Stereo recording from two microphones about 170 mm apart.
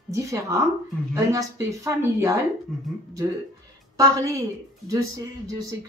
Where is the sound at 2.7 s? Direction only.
Centre (ahead or behind).